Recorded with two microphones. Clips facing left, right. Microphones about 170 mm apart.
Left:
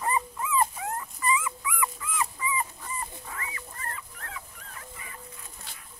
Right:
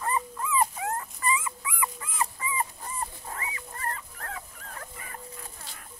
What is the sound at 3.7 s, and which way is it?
Dog, 45° right (ahead or behind).